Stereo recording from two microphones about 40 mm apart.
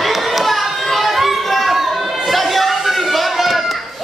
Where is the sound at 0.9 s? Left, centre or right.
Centre.